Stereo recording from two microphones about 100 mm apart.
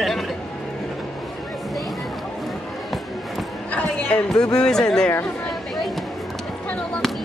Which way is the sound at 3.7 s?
10° left (ahead or behind).